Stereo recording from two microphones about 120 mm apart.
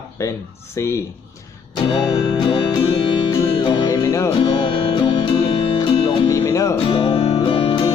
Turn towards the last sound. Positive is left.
turn(degrees=45)  # may be behind; listen again after turning